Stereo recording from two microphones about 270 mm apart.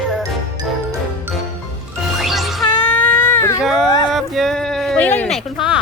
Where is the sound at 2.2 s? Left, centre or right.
Centre.